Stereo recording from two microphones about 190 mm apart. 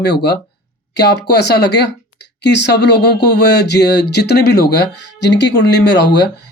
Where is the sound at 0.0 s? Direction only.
60° left (ahead or behind).